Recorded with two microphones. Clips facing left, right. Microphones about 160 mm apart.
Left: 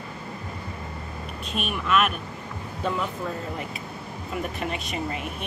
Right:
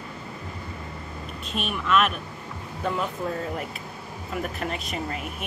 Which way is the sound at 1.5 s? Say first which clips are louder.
Right 1 dB; 5° left (ahead or behind).